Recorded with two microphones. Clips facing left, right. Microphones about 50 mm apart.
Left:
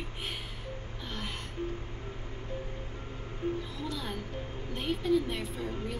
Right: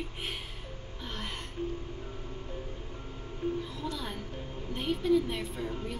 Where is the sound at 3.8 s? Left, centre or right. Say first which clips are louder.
Even; centre.